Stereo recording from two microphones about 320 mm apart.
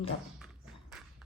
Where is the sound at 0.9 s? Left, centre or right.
Centre.